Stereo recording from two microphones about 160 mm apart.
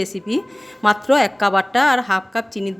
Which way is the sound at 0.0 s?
Centre (ahead or behind).